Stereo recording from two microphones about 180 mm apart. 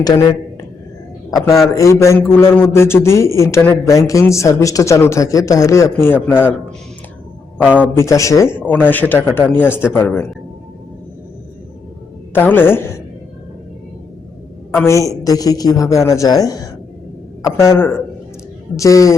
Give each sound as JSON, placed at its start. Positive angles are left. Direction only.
{"t": 0.0, "sound": "speech", "side_deg": 20}
{"t": 1.7, "sound": "a man's voice", "side_deg": 15}
{"t": 7.6, "sound": "a man's voice", "side_deg": -5}
{"t": 7.9, "sound": "a man's voice", "side_deg": 15}
{"t": 12.3, "sound": "a man's voice", "side_deg": 10}
{"t": 14.8, "sound": "a man's voice", "side_deg": 15}